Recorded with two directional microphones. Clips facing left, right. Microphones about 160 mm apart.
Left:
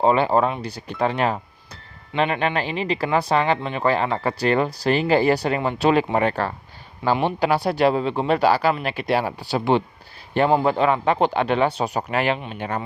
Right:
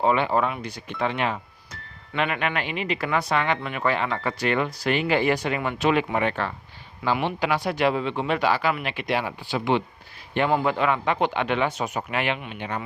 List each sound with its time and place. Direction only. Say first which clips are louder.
0.0 s speech: left 4 dB; 35° left (ahead or behind)